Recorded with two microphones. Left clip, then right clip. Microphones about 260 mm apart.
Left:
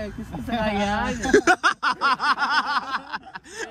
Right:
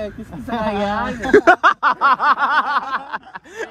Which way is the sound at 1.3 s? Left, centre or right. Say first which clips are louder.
Right 7 dB; centre.